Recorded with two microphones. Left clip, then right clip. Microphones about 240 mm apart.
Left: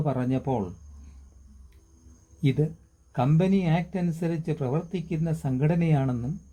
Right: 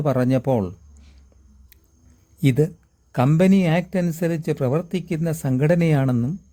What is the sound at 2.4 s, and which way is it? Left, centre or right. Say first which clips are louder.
Speech: right 7 dB; right.